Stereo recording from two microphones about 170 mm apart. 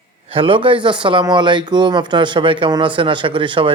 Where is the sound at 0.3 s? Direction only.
30° right (ahead or behind).